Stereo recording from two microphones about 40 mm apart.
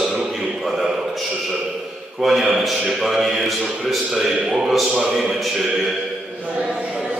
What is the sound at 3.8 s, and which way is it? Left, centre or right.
Speech, centre.